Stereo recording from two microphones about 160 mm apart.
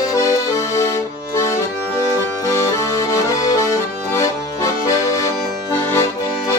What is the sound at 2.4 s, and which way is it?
Accordion, 20° left (ahead or behind).